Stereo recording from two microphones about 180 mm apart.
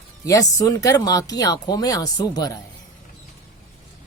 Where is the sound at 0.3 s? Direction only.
20° left (ahead or behind).